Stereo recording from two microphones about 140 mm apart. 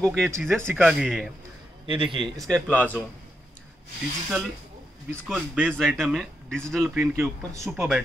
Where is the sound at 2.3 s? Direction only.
5° left (ahead or behind).